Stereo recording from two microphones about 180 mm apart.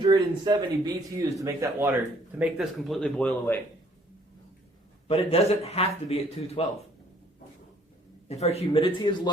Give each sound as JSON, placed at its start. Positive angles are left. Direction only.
{"t": 0.0, "sound": "speech", "side_deg": -25}
{"t": 2.4, "sound": "speech", "side_deg": 0}
{"t": 5.0, "sound": "a man's voice", "side_deg": 35}
{"t": 8.3, "sound": "a man's voice", "side_deg": 35}